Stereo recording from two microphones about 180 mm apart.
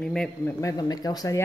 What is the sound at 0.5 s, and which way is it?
Speech, 20° left (ahead or behind).